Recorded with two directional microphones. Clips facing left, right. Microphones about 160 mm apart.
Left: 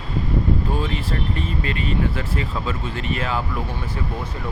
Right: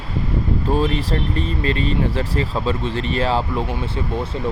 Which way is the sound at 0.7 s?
35° right (ahead or behind).